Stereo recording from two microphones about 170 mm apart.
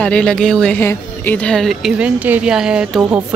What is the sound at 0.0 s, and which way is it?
A woman's voice, 5° left (ahead or behind).